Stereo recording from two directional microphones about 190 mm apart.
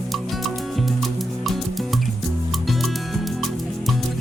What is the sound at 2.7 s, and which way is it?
Music, centre (ahead or behind).